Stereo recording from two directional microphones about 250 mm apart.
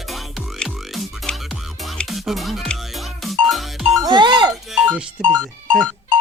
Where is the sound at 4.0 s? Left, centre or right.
Centre.